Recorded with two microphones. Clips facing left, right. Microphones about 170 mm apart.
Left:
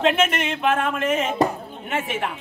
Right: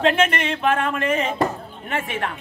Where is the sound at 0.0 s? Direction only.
Centre (ahead or behind).